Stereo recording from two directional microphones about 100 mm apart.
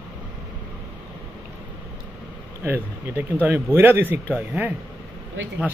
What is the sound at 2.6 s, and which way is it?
Speech, 20° right (ahead or behind).